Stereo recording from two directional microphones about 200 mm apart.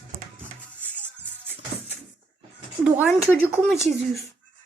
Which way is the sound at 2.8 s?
5° right (ahead or behind).